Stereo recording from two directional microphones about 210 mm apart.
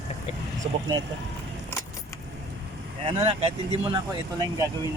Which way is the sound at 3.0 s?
30° right (ahead or behind).